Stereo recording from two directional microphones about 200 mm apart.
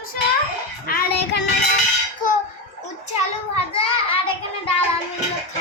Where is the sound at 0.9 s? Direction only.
55° left (ahead or behind).